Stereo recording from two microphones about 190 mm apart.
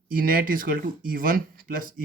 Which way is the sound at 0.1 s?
50° right (ahead or behind).